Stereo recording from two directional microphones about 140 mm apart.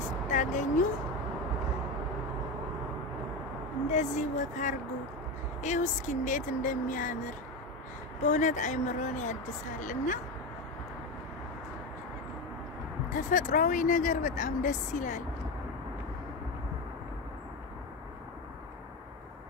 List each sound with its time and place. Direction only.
0.3 s vehicle: 65° left (ahead or behind)
3.9 s speech: 60° left (ahead or behind)
8.2 s speech: 60° left (ahead or behind)
13.1 s speech: 70° left (ahead or behind)